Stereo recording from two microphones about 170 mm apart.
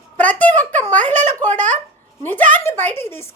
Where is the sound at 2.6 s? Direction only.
15° left (ahead or behind).